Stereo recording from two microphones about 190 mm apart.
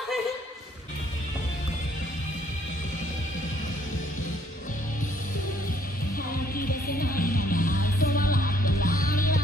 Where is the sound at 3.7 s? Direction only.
45° left (ahead or behind).